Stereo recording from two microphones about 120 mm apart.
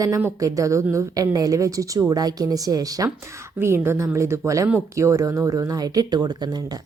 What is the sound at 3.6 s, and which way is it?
A woman's voice, 20° right (ahead or behind).